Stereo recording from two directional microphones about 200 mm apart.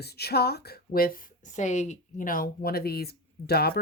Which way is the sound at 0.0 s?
55° left (ahead or behind).